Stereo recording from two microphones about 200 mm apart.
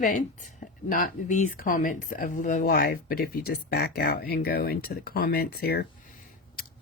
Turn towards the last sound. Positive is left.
turn(degrees=50)  # may be behind; listen again after turning